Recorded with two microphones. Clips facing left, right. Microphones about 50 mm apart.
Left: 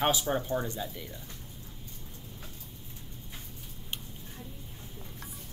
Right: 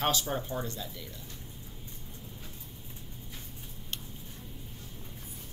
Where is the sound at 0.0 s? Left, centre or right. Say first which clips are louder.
Left 2 dB; centre.